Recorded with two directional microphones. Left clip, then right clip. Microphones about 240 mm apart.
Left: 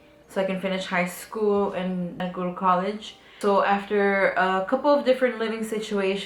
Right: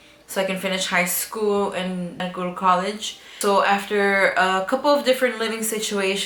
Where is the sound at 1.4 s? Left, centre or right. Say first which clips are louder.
Right 1 dB; left.